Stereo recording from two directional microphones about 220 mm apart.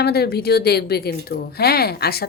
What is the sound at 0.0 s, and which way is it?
Speech, 45° left (ahead or behind).